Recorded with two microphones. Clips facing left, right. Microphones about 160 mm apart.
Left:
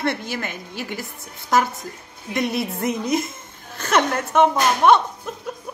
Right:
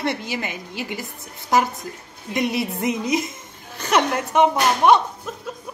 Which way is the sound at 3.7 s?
15° right (ahead or behind).